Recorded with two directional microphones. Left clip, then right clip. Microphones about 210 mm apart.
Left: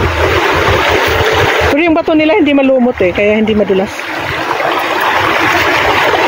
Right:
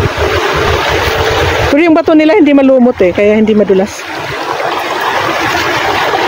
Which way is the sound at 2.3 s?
30° right (ahead or behind).